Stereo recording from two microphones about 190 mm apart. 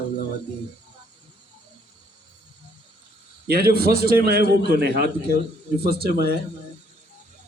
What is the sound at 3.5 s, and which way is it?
A man's voice, 55° right (ahead or behind).